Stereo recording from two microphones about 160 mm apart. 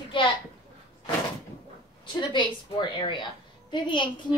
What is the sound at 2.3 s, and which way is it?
A woman's voice, 30° left (ahead or behind).